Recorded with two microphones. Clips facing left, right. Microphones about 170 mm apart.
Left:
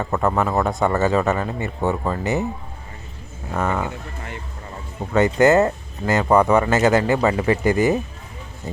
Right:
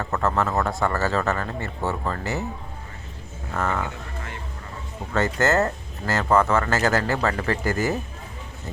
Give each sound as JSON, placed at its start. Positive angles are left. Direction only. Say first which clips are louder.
{"t": 0.0, "sound": "speech", "louder": "left 3 dB", "side_deg": 15}
{"t": 3.5, "sound": "speech", "louder": "left 3 dB", "side_deg": 15}
{"t": 5.1, "sound": "speech", "louder": "left 6 dB", "side_deg": 15}